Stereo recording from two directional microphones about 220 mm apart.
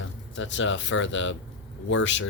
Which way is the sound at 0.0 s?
60° left (ahead or behind).